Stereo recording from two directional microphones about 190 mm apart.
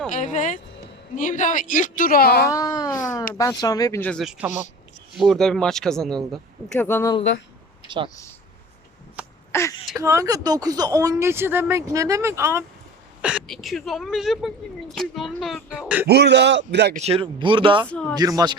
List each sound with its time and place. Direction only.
0.1 s a woman's voice: 40° left (ahead or behind)
2.5 s speech: 20° left (ahead or behind)
4.1 s speech: centre (ahead or behind)
6.8 s speech: 15° left (ahead or behind)
7.9 s speech: 25° right (ahead or behind)
9.5 s speech: 15° left (ahead or behind)
10.0 s speech: 15° right (ahead or behind)
13.2 s speech: 5° right (ahead or behind)
16.0 s a man's voice: 60° right (ahead or behind)
16.9 s speech: 35° right (ahead or behind)
17.8 s speech: 5° left (ahead or behind)
18.1 s speech: 20° right (ahead or behind)